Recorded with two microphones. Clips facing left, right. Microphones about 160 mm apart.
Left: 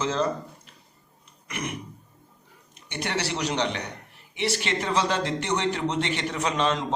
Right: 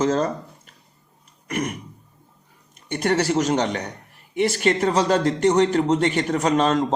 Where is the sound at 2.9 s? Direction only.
45° right (ahead or behind).